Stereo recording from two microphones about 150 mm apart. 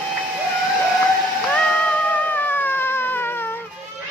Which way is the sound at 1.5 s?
5° left (ahead or behind).